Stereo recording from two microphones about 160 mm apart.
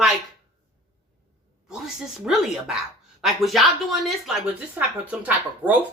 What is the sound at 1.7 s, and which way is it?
Speech, 5° right (ahead or behind).